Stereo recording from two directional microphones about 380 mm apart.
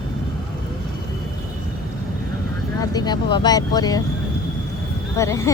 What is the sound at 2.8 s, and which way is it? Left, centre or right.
Speech, centre.